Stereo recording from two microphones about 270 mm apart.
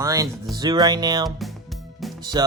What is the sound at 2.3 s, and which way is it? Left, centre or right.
Speech, centre.